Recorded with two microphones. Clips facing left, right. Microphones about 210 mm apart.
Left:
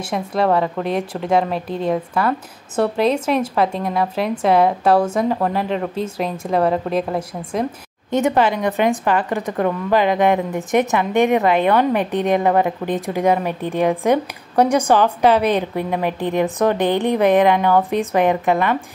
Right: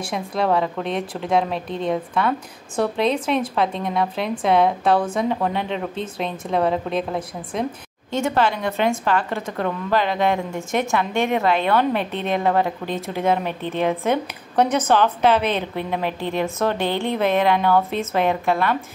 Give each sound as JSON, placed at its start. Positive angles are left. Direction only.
{"t": 0.1, "sound": "a woman's voice", "side_deg": 0}
{"t": 8.1, "sound": "a woman's voice", "side_deg": 15}